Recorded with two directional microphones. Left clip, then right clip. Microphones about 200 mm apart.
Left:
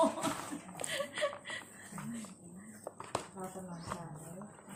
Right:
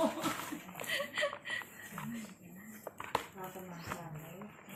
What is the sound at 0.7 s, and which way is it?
Chuckle, 10° left (ahead or behind).